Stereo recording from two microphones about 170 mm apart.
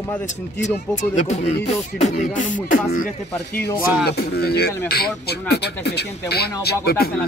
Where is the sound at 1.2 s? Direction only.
40° left (ahead or behind).